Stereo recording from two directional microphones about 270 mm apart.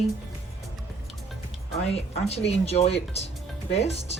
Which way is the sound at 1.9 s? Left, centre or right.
Left.